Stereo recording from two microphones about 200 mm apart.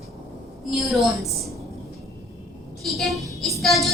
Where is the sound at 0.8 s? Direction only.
Centre (ahead or behind).